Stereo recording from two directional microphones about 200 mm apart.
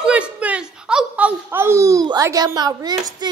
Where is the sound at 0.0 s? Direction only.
5° right (ahead or behind).